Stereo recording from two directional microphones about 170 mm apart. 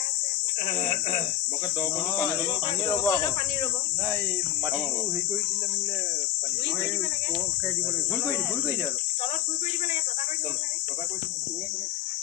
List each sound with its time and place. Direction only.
2.9 s speech: 15° left (ahead or behind)